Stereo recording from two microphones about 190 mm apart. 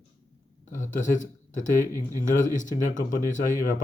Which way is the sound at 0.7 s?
45° left (ahead or behind).